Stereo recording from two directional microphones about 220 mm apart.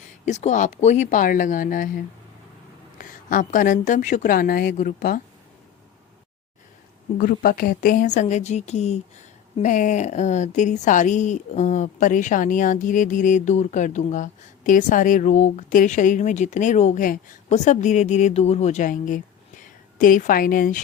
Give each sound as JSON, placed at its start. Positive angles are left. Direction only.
{"t": 0.3, "sound": "speech", "side_deg": 30}
{"t": 7.2, "sound": "speech", "side_deg": 40}